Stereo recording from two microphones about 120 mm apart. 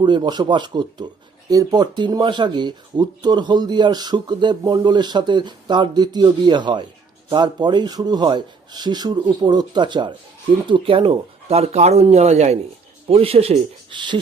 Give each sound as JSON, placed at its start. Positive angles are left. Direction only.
{"t": 0.0, "sound": "a man's voice", "side_deg": -40}
{"t": 13.1, "sound": "speech", "side_deg": -55}